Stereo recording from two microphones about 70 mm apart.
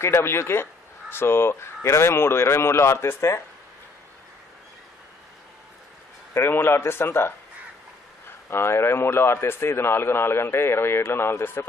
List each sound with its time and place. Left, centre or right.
0.0 s a man's voice: left
6.3 s a man's voice: left
8.5 s a man's voice: left